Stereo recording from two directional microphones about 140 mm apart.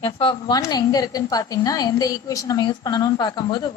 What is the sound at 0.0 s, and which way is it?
A woman's voice, 35° left (ahead or behind).